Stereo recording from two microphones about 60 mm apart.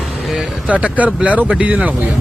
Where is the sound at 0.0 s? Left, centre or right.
Centre.